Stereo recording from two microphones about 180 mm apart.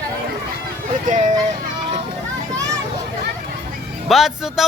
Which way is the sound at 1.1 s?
45° right (ahead or behind).